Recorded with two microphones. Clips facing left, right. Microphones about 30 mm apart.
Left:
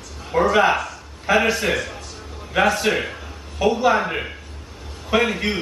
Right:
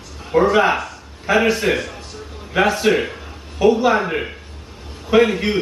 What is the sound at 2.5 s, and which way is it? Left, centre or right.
A man's voice, centre.